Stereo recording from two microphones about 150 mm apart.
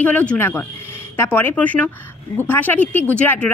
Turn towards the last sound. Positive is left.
turn(degrees=10)  # may be behind; listen again after turning